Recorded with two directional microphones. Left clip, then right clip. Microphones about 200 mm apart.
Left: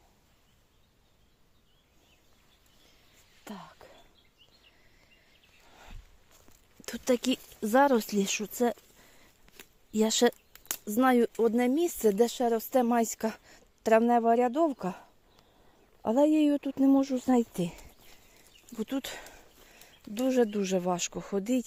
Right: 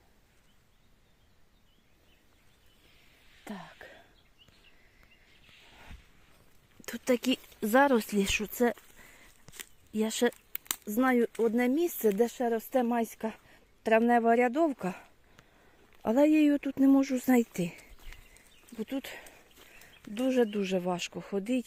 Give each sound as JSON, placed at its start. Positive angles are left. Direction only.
{"t": 3.4, "sound": "whispering", "side_deg": -15}
{"t": 6.8, "sound": "speech", "side_deg": 0}
{"t": 9.9, "sound": "speech", "side_deg": 15}
{"t": 16.0, "sound": "speech", "side_deg": -5}
{"t": 18.8, "sound": "speech", "side_deg": 15}
{"t": 20.1, "sound": "speech", "side_deg": 5}